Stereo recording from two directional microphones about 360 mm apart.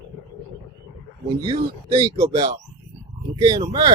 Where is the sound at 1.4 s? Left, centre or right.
Centre.